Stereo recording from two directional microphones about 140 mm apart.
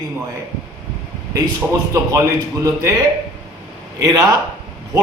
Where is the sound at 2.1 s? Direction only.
20° right (ahead or behind).